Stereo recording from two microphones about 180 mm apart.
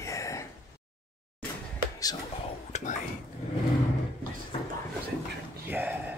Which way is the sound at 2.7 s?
40° left (ahead or behind).